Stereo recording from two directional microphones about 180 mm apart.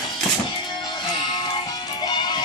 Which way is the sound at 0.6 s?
20° left (ahead or behind).